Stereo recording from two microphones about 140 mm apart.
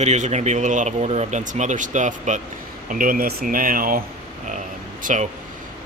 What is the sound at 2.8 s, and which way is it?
Speech, 80° right.